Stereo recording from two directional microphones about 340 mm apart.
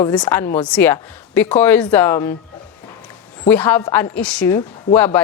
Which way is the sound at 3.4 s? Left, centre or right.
Centre.